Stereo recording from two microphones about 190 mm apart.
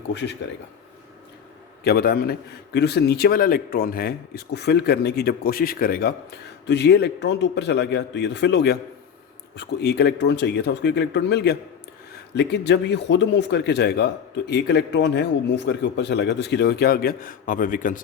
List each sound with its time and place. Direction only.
0.1 s speech: 70° left (ahead or behind)
1.8 s speech: 55° left (ahead or behind)